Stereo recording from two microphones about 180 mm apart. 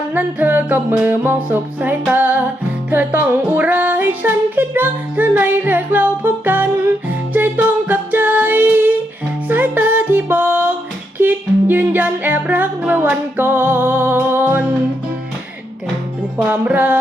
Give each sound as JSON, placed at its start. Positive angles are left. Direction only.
{"t": 0.1, "sound": "music", "side_deg": -10}
{"t": 16.5, "sound": "music", "side_deg": -10}